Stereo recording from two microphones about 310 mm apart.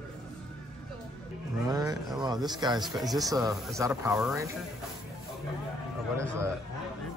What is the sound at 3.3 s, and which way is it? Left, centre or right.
Speech, centre.